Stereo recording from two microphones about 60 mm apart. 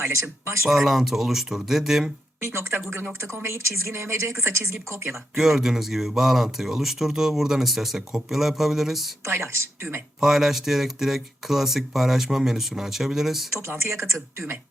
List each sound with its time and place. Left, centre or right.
0.0 s speech: right
0.7 s speech: centre
2.4 s speech: right
5.4 s speech: centre
9.2 s speech: right
10.2 s speech: centre
13.6 s speech: right